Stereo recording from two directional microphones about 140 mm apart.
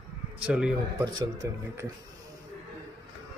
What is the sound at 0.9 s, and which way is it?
Speech, 30° right (ahead or behind).